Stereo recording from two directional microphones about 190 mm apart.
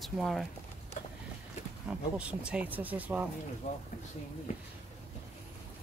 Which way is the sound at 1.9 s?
5° right (ahead or behind).